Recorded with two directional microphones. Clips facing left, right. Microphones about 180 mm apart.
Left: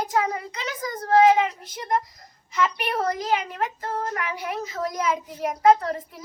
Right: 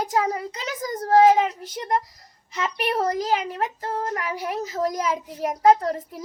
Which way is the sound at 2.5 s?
35° right (ahead or behind).